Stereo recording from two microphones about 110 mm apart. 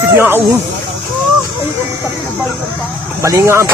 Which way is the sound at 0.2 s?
20° right (ahead or behind).